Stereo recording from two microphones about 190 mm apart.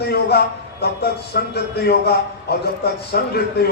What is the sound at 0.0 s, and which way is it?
A man's voice, 55° left (ahead or behind).